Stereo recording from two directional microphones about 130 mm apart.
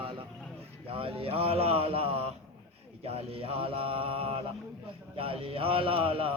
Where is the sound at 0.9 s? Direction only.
45° right (ahead or behind).